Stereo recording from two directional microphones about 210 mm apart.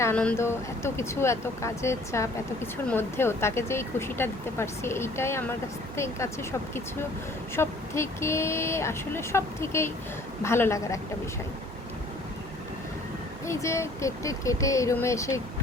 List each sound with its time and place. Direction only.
0.0 s speech: 5° left (ahead or behind)
7.5 s speech: 10° left (ahead or behind)
13.5 s speech: 15° left (ahead or behind)